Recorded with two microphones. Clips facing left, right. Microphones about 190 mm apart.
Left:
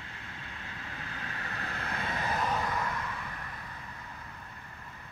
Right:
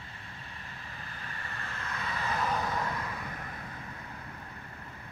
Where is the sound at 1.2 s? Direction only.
70° left (ahead or behind).